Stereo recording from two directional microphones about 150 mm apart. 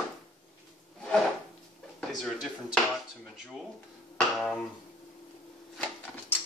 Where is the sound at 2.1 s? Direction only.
Centre (ahead or behind).